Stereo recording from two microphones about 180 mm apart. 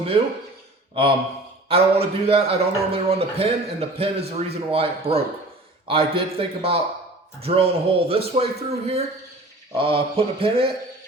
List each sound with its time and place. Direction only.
1.6 s a man's voice: 35° right (ahead or behind)